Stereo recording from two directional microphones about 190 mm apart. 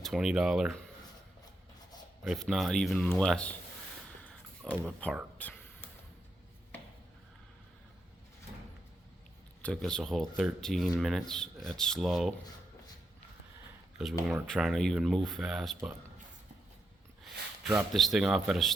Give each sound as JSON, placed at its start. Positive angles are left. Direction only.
{"t": 0.0, "sound": "speech", "side_deg": -5}
{"t": 2.2, "sound": "speech", "side_deg": 0}
{"t": 4.9, "sound": "speech", "side_deg": 5}
{"t": 5.4, "sound": "whispering", "side_deg": 10}
{"t": 9.6, "sound": "speech", "side_deg": 5}
{"t": 14.3, "sound": "speech", "side_deg": -5}
{"t": 17.6, "sound": "speech", "side_deg": 0}